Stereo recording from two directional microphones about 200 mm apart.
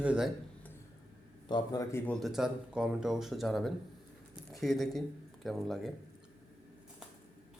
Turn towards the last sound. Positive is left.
turn(degrees=0)  # may be behind; listen again after turning